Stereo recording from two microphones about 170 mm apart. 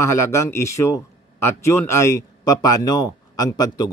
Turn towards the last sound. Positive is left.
turn(degrees=20)  # may be behind; listen again after turning